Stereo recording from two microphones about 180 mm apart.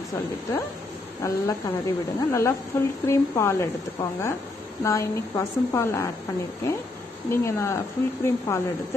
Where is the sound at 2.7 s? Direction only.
15° left (ahead or behind).